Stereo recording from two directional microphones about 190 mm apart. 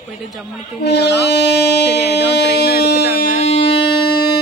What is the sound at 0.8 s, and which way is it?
Speech, 65° left (ahead or behind).